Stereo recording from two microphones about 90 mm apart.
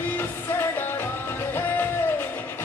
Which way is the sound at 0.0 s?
20° left (ahead or behind).